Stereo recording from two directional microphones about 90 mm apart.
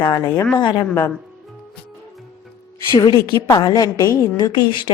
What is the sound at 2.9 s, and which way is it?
A woman's voice, 55° left (ahead or behind).